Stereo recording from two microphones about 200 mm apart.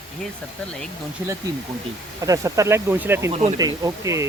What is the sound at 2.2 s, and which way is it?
Speech, 15° right (ahead or behind).